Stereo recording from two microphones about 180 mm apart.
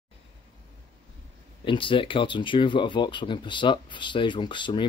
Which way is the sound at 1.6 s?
30° left (ahead or behind).